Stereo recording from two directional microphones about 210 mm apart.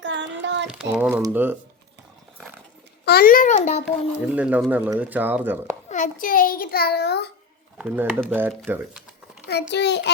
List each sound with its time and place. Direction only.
0.0 s child singing: 60° right (ahead or behind)
0.7 s speech: 5° right (ahead or behind)
3.0 s a child's voice: 50° left (ahead or behind)
3.8 s speech: 5° right (ahead or behind)
5.9 s a child's voice: 40° left (ahead or behind)
7.8 s a child's voice: 5° right (ahead or behind)
9.5 s a child's voice: 50° left (ahead or behind)